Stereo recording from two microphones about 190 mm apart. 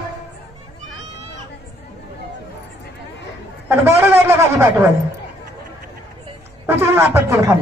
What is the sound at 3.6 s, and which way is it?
Speech, 10° right (ahead or behind).